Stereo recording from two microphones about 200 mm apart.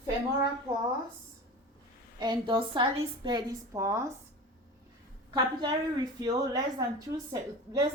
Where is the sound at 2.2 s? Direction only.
25° right (ahead or behind).